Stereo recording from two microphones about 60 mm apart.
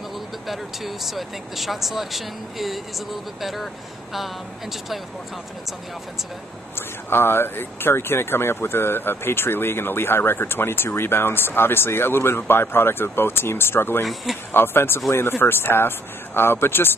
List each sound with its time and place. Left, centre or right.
0.5 s speech: centre
7.1 s speech: left
14.0 s speech: centre
14.5 s speech: left